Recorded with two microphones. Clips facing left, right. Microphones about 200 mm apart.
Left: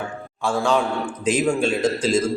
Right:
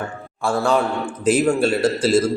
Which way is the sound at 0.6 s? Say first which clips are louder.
Right 1 dB; 5° right (ahead or behind).